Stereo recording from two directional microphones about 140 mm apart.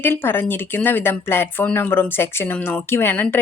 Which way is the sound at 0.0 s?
15° left (ahead or behind).